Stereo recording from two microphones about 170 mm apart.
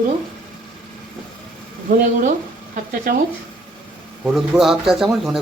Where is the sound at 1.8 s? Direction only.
50° right (ahead or behind).